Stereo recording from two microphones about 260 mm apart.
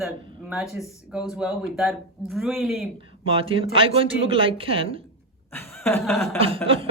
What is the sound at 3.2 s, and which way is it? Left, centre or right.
A man's voice, right.